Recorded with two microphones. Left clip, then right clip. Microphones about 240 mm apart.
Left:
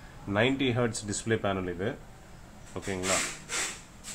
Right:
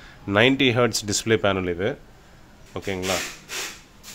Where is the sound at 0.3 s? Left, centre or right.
Right.